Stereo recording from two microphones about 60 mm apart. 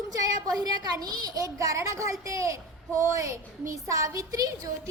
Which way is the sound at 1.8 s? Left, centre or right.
Right.